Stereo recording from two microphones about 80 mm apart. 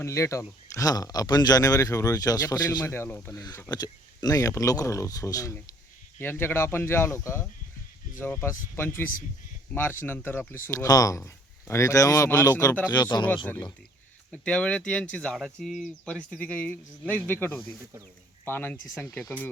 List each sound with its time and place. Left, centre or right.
0.0 s speech: left
2.8 s speech: left
3.7 s speech: left
6.1 s speech: left
10.8 s speech: left
11.7 s speech: left
12.9 s speech: left
14.3 s speech: centre
15.5 s speech: centre
16.3 s speech: centre